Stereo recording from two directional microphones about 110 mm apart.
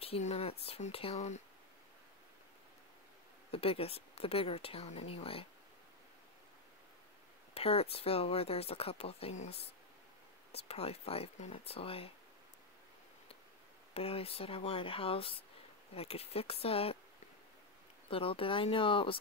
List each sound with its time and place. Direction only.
0.0 s speech: 65° left (ahead or behind); by 1.4 s 90° left
3.5 s speech: 60° left (ahead or behind)
7.5 s speech: 65° left (ahead or behind)
10.7 s speech: 65° left (ahead or behind)
13.9 s speech: 60° left (ahead or behind)
18.1 s speech: 55° left (ahead or behind)